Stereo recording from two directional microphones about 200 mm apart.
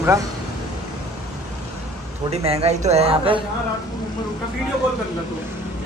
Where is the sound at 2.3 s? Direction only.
30° right (ahead or behind).